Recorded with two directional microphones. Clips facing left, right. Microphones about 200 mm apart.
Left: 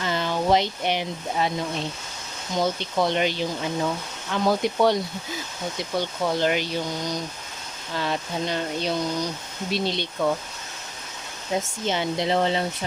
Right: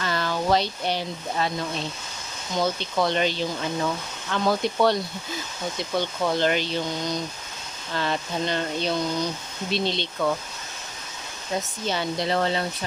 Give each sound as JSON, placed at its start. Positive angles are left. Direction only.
{"t": 0.0, "sound": "speech", "side_deg": 20}
{"t": 11.9, "sound": "speech", "side_deg": 20}